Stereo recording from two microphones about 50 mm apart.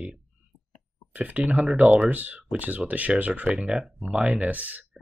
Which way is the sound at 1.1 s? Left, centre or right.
Right.